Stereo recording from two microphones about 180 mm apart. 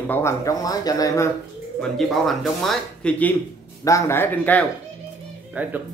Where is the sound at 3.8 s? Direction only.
15° left (ahead or behind).